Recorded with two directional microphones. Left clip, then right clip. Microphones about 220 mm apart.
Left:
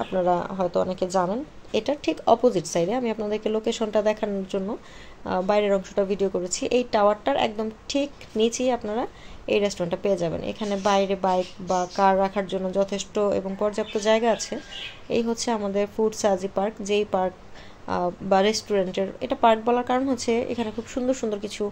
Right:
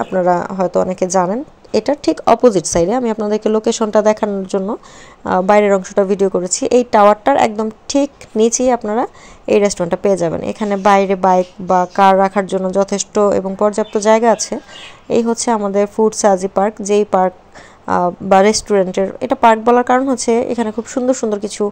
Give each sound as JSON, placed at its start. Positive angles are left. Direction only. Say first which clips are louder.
{"t": 0.0, "sound": "a woman's voice", "louder": "right 9 dB", "side_deg": -30}
{"t": 0.8, "sound": "a woman's voice", "louder": "right 9 dB", "side_deg": -20}
{"t": 1.9, "sound": "a woman's voice", "louder": "right 8 dB", "side_deg": -30}